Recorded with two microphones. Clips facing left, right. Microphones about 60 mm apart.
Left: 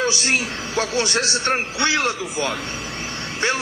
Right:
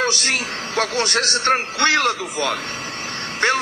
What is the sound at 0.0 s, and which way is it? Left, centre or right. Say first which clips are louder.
A man's voice: even; right.